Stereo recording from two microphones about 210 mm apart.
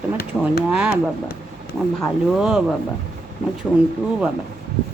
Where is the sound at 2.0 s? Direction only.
Centre (ahead or behind).